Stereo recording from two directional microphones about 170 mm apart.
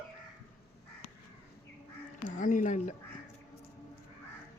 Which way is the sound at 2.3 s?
50° left (ahead or behind).